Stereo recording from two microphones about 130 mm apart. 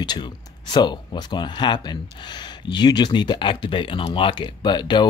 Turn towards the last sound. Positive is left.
turn(degrees=35)  # may be behind; listen again after turning